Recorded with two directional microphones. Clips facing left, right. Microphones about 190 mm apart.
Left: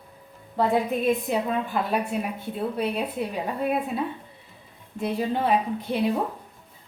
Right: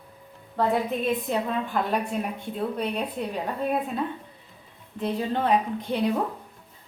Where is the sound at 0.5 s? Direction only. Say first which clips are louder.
Left 1 dB; 10° left (ahead or behind).